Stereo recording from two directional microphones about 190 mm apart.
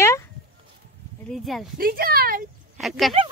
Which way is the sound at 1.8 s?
50° right (ahead or behind).